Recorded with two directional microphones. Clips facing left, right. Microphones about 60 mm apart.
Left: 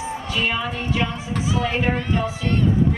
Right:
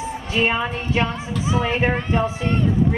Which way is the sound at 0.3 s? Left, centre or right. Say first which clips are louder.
Right 4 dB; right.